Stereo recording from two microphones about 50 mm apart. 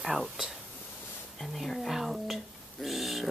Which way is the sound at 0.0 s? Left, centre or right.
Centre.